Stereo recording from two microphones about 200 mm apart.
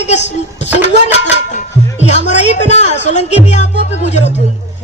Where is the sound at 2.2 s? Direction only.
35° left (ahead or behind).